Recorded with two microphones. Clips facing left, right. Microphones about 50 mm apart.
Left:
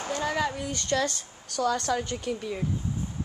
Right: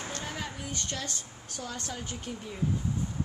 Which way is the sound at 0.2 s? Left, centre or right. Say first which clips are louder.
Left 10 dB; left.